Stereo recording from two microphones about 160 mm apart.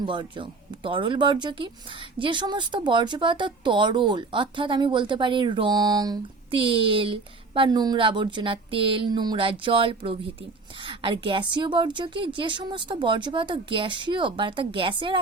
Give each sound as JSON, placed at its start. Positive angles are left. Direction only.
{"t": 0.0, "sound": "speech", "side_deg": -30}